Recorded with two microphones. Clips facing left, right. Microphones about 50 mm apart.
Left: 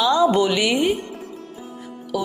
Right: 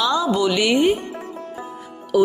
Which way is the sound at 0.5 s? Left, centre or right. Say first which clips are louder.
Right 2 dB; centre.